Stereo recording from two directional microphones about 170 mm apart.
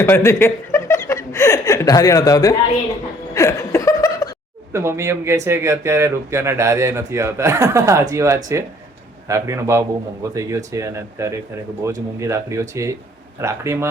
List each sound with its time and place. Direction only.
0.0 s speech: 15° left (ahead or behind)
3.3 s laughter: 15° left (ahead or behind)
4.7 s speech: 15° right (ahead or behind)